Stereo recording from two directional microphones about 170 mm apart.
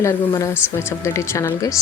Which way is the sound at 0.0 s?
15° left (ahead or behind).